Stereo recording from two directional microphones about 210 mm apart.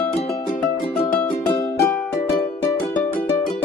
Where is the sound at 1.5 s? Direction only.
5° left (ahead or behind).